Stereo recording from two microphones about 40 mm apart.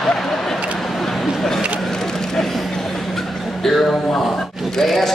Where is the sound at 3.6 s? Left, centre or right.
Centre.